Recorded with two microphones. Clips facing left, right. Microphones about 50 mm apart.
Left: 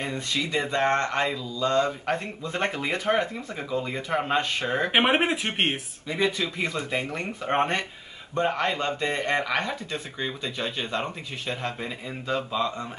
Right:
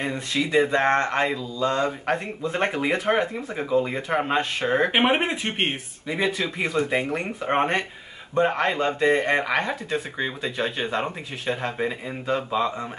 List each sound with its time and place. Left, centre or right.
0.0 s speech: centre
4.9 s speech: centre
6.0 s speech: centre